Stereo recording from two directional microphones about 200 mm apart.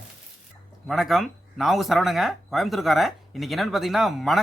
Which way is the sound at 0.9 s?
Centre (ahead or behind).